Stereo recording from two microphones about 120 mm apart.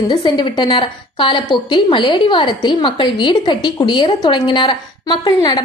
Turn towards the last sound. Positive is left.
turn(degrees=35)  # may be behind; listen again after turning